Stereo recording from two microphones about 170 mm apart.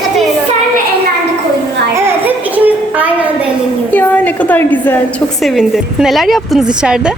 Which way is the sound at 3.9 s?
10° left (ahead or behind).